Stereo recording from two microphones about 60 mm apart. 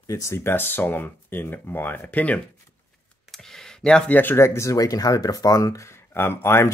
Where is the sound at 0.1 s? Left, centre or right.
Left.